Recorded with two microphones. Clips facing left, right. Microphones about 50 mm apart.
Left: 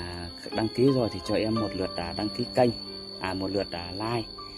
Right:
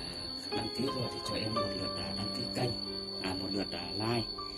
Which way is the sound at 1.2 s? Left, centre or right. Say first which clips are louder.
Left 10 dB; left.